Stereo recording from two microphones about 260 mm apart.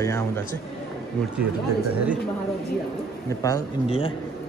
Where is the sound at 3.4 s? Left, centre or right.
Centre.